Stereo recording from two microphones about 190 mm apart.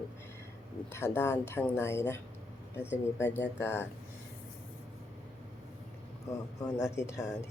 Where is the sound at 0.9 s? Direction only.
10° left (ahead or behind).